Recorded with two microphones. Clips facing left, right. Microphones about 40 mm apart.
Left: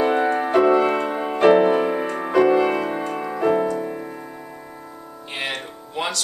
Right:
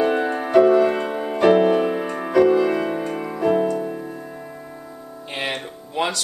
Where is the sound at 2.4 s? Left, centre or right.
Left.